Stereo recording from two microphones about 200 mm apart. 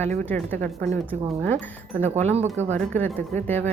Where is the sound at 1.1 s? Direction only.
10° left (ahead or behind).